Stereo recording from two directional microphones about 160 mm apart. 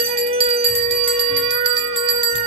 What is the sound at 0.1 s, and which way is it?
Music, 40° right (ahead or behind).